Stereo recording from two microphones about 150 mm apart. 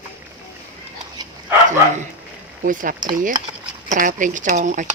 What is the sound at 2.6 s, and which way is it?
Speech, 65° right (ahead or behind).